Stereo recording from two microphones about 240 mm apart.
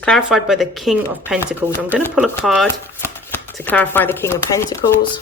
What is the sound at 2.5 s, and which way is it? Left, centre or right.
Speech, centre.